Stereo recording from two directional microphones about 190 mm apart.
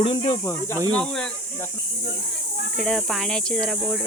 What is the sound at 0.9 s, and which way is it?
Speech, 5° left (ahead or behind).